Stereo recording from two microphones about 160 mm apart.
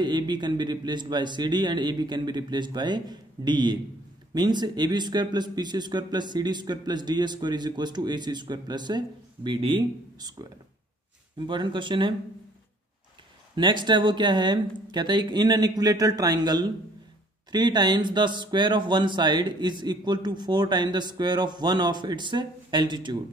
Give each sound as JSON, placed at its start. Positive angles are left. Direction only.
{"t": 0.0, "sound": "a man's voice", "side_deg": -25}
{"t": 13.6, "sound": "a man's voice", "side_deg": -30}